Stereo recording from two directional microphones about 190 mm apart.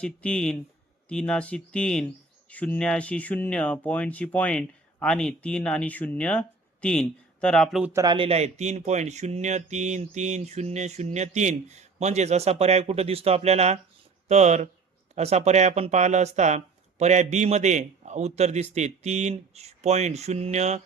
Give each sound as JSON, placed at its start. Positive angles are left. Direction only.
{"t": 0.0, "sound": "speech", "side_deg": 5}
{"t": 7.9, "sound": "speech", "side_deg": -25}